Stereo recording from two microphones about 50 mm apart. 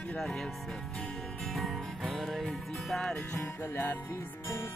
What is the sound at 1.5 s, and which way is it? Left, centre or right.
Music, centre.